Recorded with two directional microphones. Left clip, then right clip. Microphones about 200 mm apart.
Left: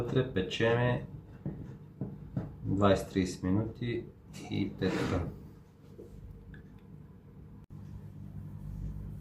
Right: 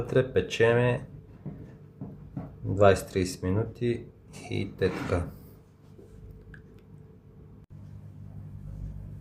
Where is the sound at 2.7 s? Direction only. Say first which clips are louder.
Right 6 dB; 60° right (ahead or behind).